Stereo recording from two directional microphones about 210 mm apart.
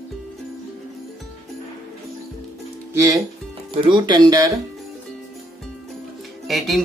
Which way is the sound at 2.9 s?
15° right (ahead or behind).